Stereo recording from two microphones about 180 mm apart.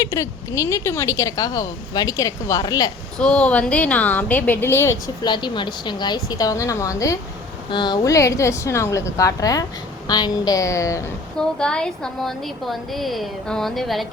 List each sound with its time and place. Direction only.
0.0 s speech: 20° left (ahead or behind)
3.2 s a woman's voice: 5° left (ahead or behind)
11.3 s a woman's voice: 5° left (ahead or behind)